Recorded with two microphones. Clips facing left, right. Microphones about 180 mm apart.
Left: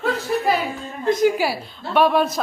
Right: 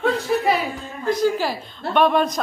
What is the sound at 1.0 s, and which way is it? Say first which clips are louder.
A woman's voice: left 2 dB; 20° left (ahead or behind).